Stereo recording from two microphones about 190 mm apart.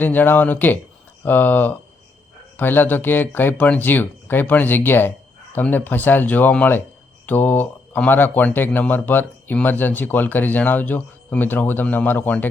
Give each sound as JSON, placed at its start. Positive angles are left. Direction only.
{"t": 0.0, "sound": "speech", "side_deg": 10}